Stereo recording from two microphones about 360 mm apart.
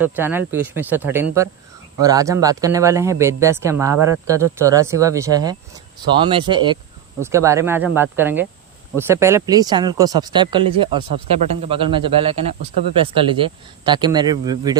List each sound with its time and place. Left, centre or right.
0.0 s speech: centre